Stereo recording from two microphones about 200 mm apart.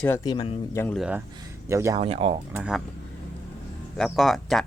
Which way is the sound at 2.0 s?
30° right (ahead or behind).